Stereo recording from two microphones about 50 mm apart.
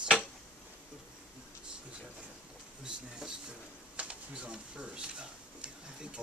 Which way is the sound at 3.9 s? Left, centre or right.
Right.